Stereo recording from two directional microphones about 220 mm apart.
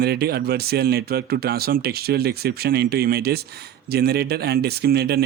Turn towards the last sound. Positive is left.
turn(degrees=-45)  # may be behind; listen again after turning